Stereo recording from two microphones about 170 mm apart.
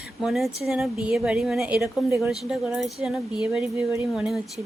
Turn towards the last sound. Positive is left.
turn(degrees=-5)  # may be behind; listen again after turning